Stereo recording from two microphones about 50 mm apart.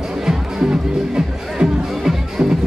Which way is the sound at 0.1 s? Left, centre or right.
Centre.